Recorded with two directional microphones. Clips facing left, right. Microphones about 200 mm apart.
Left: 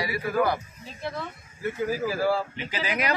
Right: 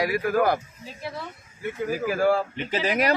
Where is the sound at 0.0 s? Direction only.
50° right (ahead or behind).